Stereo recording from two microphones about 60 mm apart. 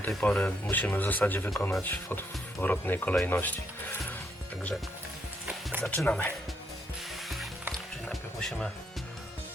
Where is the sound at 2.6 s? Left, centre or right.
Left.